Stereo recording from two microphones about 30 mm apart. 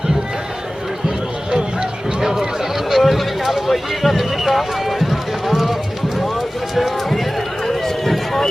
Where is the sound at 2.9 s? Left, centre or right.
Centre.